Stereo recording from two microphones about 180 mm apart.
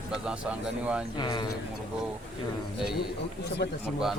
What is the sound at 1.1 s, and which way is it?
Speech, 25° left (ahead or behind).